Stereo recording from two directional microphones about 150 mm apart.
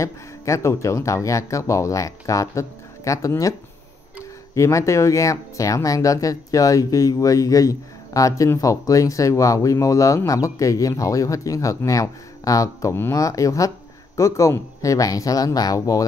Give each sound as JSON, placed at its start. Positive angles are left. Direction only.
{"t": 0.0, "sound": "speech", "side_deg": 20}
{"t": 4.6, "sound": "speech", "side_deg": 20}